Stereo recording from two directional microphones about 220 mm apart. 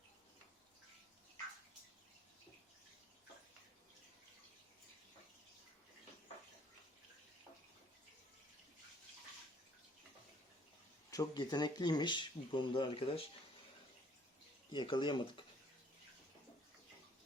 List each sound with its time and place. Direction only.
11.1 s speech: 15° left (ahead or behind)
14.7 s speech: 20° left (ahead or behind)